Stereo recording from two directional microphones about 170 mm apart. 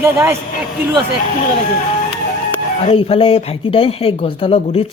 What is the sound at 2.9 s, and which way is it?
Speech, 35° left (ahead or behind).